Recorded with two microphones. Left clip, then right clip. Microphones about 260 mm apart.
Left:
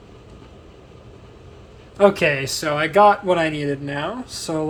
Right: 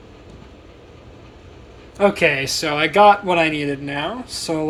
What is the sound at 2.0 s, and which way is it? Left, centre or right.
Speech, left.